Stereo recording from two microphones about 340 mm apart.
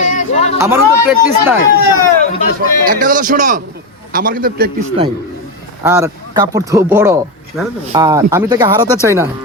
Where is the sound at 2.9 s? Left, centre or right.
Right.